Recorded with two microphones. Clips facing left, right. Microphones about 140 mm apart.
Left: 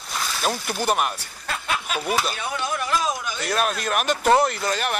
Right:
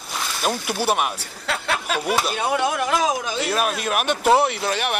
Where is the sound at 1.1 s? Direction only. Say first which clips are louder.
Right 4 dB; 75° right (ahead or behind).